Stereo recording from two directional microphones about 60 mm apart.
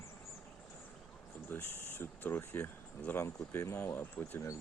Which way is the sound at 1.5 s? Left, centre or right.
Left.